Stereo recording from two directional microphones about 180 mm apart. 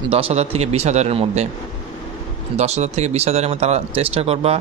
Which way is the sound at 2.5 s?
40° right (ahead or behind).